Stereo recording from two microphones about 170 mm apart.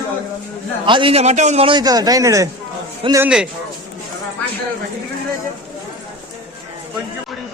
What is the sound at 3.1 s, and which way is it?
Speech, 5° right (ahead or behind).